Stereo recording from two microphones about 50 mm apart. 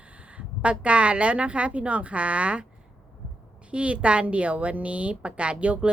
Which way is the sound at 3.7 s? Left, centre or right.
Right.